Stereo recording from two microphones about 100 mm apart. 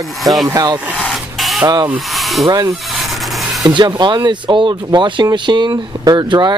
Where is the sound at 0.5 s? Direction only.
40° right (ahead or behind).